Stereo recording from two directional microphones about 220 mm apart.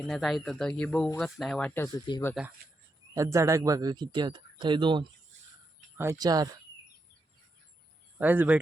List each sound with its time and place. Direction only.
0.0 s speech: centre (ahead or behind); by 2.3 s 20° left (ahead or behind)
3.2 s speech: 15° right (ahead or behind)
8.2 s speech: 10° right (ahead or behind)